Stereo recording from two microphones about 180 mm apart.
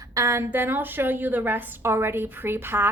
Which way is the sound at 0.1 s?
15° right (ahead or behind).